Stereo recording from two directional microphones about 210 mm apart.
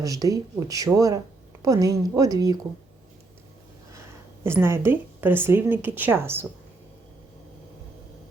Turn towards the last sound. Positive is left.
turn(degrees=-10)  # may be behind; listen again after turning